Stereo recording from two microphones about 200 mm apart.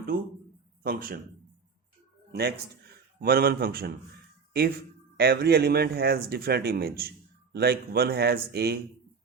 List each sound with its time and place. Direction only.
0.8 s speech: 45° right (ahead or behind)
3.2 s speech: 50° right (ahead or behind)